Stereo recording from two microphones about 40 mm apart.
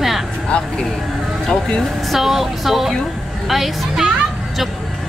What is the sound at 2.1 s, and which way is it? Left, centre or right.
Speech, centre.